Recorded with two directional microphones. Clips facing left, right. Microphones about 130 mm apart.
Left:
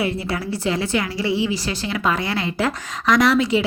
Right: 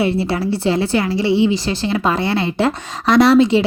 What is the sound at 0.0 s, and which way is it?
A woman's voice, 30° right (ahead or behind).